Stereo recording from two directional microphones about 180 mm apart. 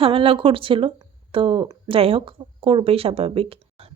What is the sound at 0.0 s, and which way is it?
Speech, 30° right (ahead or behind).